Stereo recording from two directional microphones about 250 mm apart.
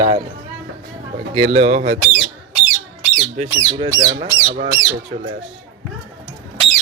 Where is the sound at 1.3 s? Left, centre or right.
Right.